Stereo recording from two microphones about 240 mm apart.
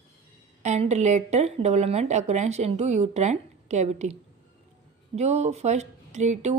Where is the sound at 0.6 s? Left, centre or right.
Right.